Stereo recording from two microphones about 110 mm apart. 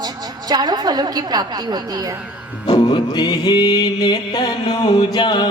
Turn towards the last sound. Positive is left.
turn(degrees=40)  # may be behind; listen again after turning